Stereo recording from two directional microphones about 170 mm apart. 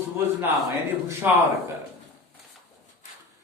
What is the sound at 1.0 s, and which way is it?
Speech, 15° right (ahead or behind).